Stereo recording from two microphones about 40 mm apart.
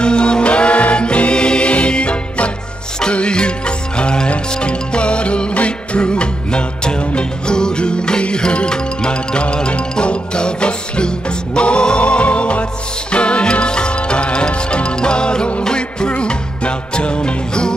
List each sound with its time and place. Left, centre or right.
0.0 s music: left